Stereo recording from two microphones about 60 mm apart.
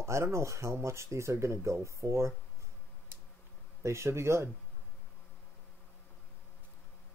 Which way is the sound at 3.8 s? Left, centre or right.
Right.